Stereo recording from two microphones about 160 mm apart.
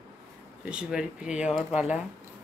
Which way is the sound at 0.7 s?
5° right (ahead or behind).